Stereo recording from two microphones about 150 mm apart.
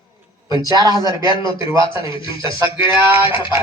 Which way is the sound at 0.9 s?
30° left (ahead or behind).